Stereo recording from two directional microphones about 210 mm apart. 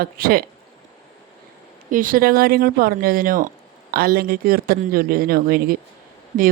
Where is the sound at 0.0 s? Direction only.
45° right (ahead or behind).